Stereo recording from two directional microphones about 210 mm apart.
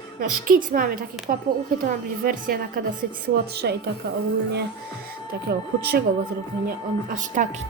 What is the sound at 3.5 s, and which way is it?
Music, 50° right (ahead or behind).